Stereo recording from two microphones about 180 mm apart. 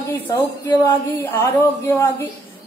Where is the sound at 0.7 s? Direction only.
10° left (ahead or behind).